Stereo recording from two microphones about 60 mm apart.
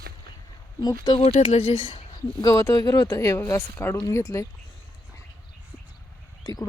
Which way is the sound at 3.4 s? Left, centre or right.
Left.